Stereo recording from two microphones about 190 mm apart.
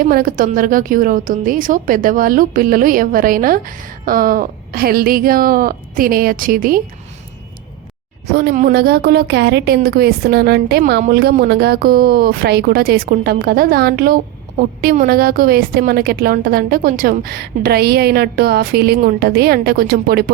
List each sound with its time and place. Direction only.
0.0 s a woman's voice: 50° right (ahead or behind)
8.3 s a woman's voice: 60° right (ahead or behind)